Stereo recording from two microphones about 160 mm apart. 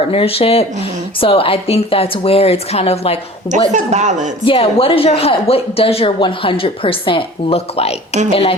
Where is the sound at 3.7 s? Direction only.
45° right (ahead or behind).